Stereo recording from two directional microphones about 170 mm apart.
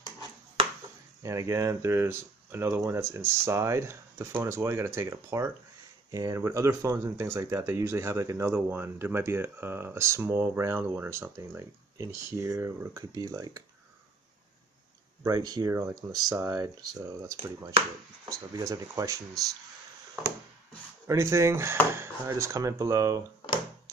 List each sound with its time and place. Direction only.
1.2 s speech: 20° right (ahead or behind)
15.2 s speech: 20° right (ahead or behind)
21.1 s speech: 15° right (ahead or behind)